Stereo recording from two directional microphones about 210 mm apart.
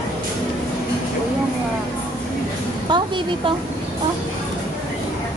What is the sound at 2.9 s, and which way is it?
Speech, 20° right (ahead or behind).